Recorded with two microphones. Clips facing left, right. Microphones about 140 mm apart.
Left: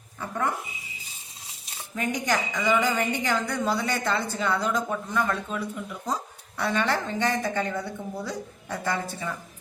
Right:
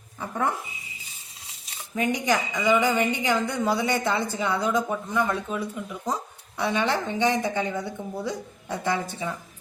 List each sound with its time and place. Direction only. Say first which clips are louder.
2.0 s a woman's voice: right 3 dB; 15° right (ahead or behind)